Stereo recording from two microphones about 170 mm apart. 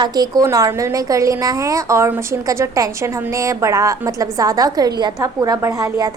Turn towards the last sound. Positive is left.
turn(degrees=-20)  # may be behind; listen again after turning